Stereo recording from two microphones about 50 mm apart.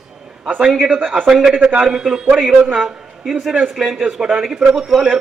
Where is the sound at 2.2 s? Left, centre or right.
Right.